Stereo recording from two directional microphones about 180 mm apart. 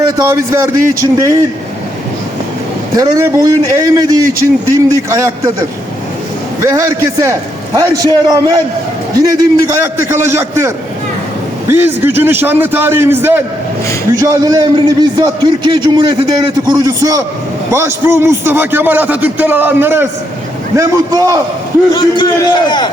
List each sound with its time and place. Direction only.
0.2 s a man's voice: 15° right (ahead or behind)
2.9 s a man's voice: 20° right (ahead or behind)
6.6 s a man's voice: 15° right (ahead or behind)
11.7 s a man's voice: 10° right (ahead or behind)
21.9 s a man's voice: 25° left (ahead or behind)